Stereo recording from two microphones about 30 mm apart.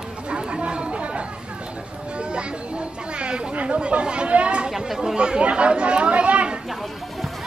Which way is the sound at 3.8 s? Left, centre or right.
Right.